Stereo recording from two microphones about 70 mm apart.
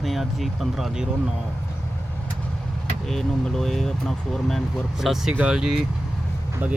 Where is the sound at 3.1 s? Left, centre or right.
Centre.